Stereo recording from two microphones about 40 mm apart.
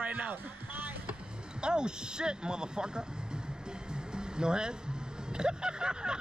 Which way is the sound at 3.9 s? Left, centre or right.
Right.